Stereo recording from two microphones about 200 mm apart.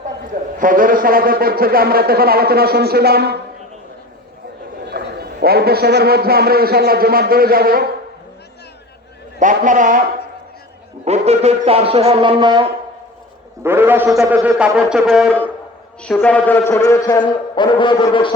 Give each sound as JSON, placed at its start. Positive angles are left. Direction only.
{"t": 0.6, "sound": "a man's voice", "side_deg": -45}
{"t": 4.9, "sound": "a man's voice", "side_deg": -50}
{"t": 9.4, "sound": "a man's voice", "side_deg": -40}
{"t": 11.0, "sound": "a man's voice", "side_deg": -30}
{"t": 13.7, "sound": "a man's voice", "side_deg": -10}